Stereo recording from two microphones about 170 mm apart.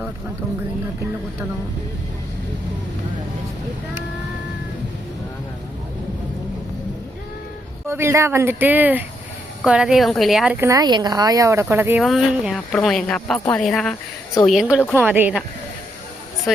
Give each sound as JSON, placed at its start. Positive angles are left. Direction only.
{"t": 7.9, "sound": "speech", "side_deg": -15}
{"t": 10.6, "sound": "speech", "side_deg": -20}
{"t": 12.0, "sound": "speech", "side_deg": 0}
{"t": 14.8, "sound": "a woman's voice", "side_deg": 10}
{"t": 15.0, "sound": "speech", "side_deg": -10}